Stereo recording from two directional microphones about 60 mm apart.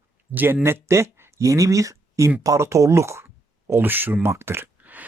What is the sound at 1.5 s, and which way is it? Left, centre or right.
Speech, right.